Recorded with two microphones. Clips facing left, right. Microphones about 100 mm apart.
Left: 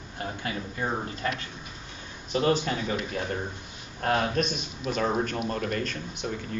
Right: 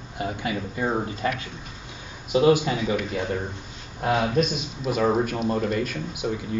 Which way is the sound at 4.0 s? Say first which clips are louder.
Right 3 dB; 5° right (ahead or behind).